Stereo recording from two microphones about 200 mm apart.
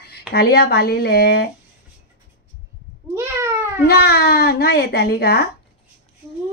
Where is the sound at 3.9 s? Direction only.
55° left (ahead or behind).